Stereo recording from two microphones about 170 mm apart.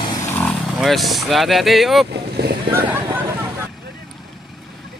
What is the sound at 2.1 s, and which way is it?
Vehicle, 75° right (ahead or behind).